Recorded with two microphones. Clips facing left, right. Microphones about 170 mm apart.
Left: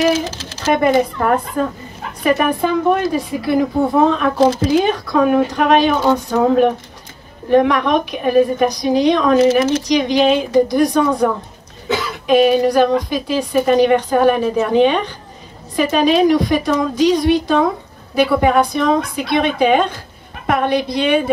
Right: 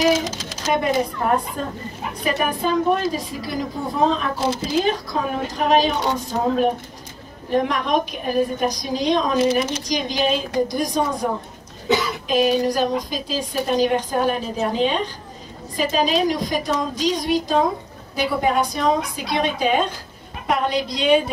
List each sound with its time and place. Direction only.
0.8 s a woman's voice: 60° left (ahead or behind)
12.3 s a woman's voice: 60° left (ahead or behind)